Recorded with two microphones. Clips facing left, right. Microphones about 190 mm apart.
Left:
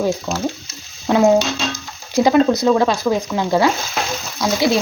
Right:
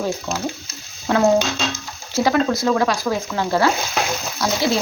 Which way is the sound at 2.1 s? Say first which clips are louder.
Left 5 dB; 20° left (ahead or behind).